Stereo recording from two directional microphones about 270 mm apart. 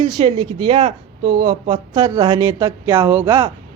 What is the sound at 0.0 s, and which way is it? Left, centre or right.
Speech, centre.